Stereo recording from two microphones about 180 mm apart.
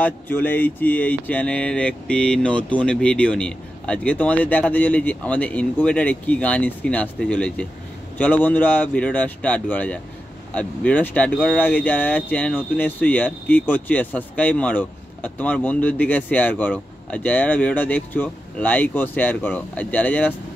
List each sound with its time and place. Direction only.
0.0 s speech: 10° left (ahead or behind)